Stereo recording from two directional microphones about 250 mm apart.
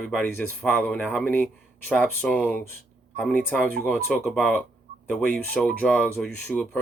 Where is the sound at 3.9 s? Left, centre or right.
Centre.